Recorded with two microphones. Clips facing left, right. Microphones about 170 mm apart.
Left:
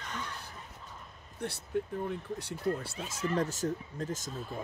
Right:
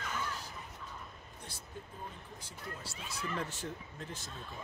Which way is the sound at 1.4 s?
70° left (ahead or behind).